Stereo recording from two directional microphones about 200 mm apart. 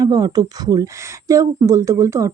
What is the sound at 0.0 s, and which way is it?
Speech, 20° right (ahead or behind).